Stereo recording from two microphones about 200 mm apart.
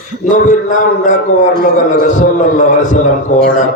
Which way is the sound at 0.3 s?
40° left (ahead or behind).